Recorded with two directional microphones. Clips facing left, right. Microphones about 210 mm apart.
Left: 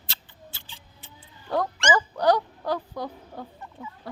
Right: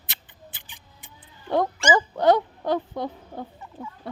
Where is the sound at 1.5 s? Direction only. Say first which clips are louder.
Right 3 dB; 25° right (ahead or behind).